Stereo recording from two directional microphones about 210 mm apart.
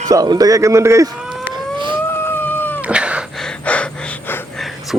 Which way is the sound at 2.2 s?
10° left (ahead or behind).